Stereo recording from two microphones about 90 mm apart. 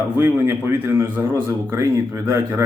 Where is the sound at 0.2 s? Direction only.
25° right (ahead or behind).